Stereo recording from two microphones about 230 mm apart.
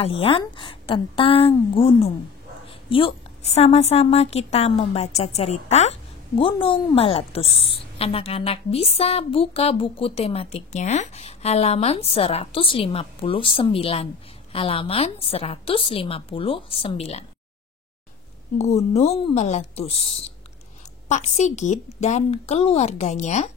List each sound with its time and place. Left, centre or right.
0.0 s a woman's voice: left
18.6 s a woman's voice: left